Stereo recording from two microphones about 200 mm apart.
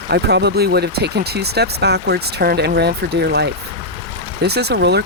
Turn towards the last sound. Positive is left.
turn(degrees=-55)  # may be behind; listen again after turning